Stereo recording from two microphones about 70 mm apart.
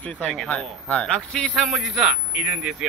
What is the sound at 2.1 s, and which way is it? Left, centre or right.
Speech, centre.